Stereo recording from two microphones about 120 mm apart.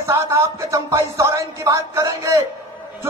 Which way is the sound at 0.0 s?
25° right (ahead or behind).